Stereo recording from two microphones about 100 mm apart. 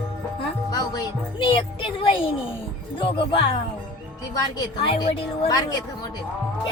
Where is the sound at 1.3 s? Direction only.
60° left (ahead or behind).